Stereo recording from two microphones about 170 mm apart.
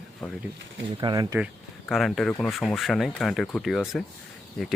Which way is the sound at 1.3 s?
5° right (ahead or behind).